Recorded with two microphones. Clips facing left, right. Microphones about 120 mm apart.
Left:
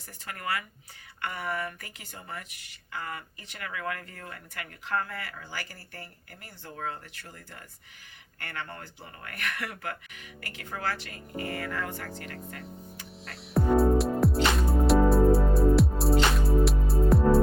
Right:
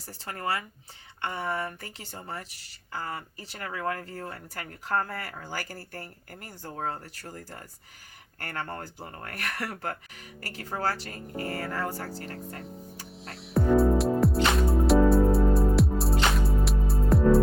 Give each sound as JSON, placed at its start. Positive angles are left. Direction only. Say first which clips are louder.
{"t": 0.1, "sound": "speech", "louder": "right 2 dB", "side_deg": -30}
{"t": 13.2, "sound": "music", "louder": "right 1 dB", "side_deg": 0}